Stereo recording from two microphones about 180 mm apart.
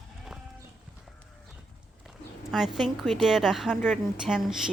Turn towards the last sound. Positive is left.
turn(degrees=0)  # may be behind; listen again after turning